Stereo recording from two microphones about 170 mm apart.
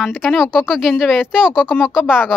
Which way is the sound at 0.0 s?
Centre (ahead or behind).